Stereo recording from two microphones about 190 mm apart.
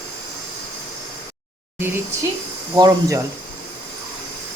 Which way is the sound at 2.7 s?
20° right (ahead or behind).